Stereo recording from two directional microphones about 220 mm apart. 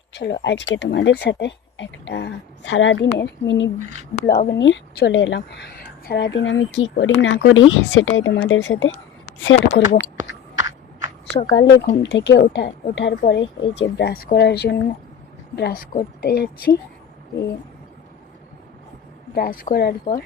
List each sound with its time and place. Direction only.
0.1 s speech: 50° left (ahead or behind)
4.1 s speech: 35° left (ahead or behind); by 10.0 s 55° left (ahead or behind)
10.6 s a sound: 15° right (ahead or behind)
11.5 s speech: 50° left (ahead or behind)
19.3 s speech: 40° left (ahead or behind)